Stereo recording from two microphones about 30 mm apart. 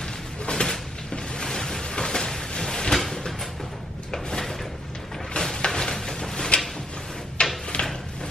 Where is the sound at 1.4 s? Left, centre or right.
Centre.